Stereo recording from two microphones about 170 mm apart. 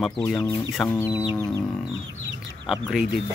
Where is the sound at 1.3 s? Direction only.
20° left (ahead or behind).